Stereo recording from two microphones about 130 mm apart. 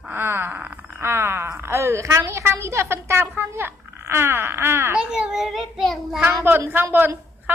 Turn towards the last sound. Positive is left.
turn(degrees=-15)  # may be behind; listen again after turning